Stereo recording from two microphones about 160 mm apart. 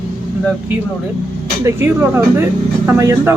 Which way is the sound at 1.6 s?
15° right (ahead or behind).